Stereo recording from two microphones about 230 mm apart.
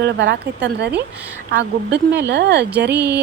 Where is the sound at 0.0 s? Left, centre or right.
Right.